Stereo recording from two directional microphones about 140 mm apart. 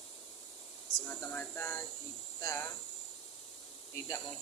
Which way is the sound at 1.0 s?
15° left (ahead or behind).